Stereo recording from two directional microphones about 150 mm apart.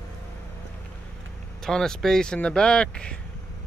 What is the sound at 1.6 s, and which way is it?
Speech, 5° left (ahead or behind).